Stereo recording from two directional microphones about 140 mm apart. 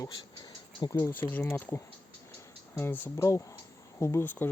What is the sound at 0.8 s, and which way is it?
Speech, 20° left (ahead or behind).